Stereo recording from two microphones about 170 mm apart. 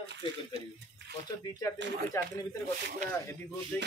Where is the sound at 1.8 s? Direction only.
90° right.